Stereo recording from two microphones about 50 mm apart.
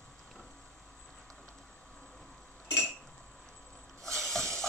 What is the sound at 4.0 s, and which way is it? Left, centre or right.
Snake, centre.